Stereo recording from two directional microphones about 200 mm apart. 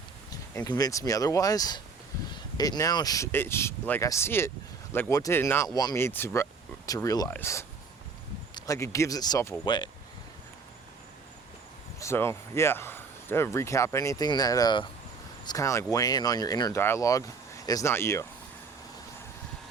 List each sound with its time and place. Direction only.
0.5 s speech: 20° left (ahead or behind)
11.9 s speech: 15° left (ahead or behind)